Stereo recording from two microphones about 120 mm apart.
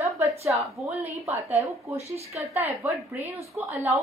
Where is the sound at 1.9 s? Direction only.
60° right (ahead or behind).